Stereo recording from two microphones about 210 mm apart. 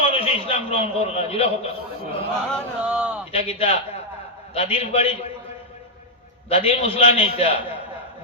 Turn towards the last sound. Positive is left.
turn(degrees=25)  # may be behind; listen again after turning